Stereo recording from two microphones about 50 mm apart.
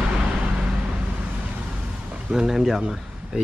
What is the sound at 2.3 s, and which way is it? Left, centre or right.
Speech, centre.